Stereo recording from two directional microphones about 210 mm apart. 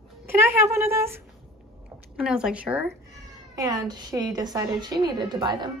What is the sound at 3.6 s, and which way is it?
A woman's voice, 20° right (ahead or behind).